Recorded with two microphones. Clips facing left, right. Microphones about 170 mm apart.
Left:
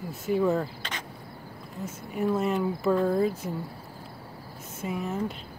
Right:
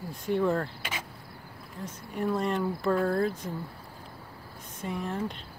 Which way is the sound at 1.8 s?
5° left (ahead or behind).